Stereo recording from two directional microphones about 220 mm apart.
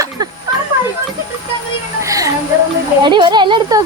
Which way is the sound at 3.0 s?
20° right (ahead or behind).